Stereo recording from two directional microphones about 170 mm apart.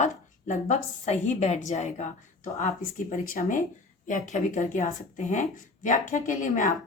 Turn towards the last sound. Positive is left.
turn(degrees=50)  # may be behind; listen again after turning